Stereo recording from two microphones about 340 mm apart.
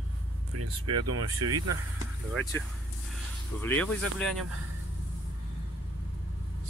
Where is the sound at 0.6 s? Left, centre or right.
Right.